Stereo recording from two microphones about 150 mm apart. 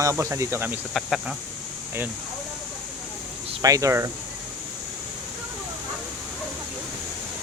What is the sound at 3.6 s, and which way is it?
Speech, 20° right (ahead or behind).